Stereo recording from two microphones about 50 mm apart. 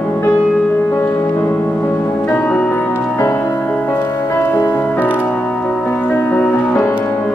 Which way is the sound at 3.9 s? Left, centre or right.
Left.